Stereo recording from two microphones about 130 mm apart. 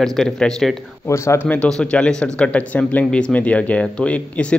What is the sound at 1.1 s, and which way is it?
Speech, 20° left (ahead or behind).